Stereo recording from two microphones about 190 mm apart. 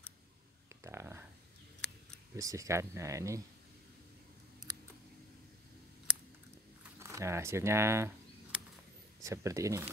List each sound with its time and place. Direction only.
0.8 s speech: 15° right (ahead or behind)
2.3 s speech: 15° right (ahead or behind)
7.0 s a sound: 15° right (ahead or behind)
9.2 s speech: 15° right (ahead or behind)